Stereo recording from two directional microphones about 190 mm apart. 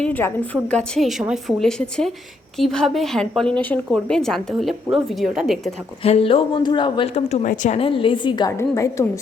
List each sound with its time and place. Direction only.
0.0 s a woman's voice: 10° left (ahead or behind)
6.0 s speech: 30° left (ahead or behind); by 9.0 s 15° left (ahead or behind)